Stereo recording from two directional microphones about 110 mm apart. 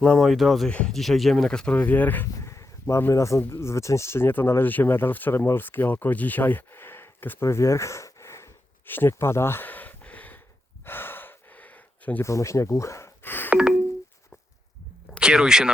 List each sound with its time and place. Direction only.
0.0 s speech: centre (ahead or behind); by 8.4 s 25° left (ahead or behind)
8.9 s a sound: 20° left (ahead or behind)
10.8 s gasp: 20° left (ahead or behind)
12.2 s speech: 25° left (ahead or behind)
13.5 s telephone dialing: 10° right (ahead or behind)
15.2 s speech: 5° right (ahead or behind)